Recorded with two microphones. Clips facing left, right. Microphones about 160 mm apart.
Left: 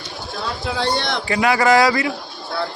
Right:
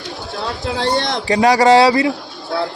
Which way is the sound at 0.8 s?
90° right.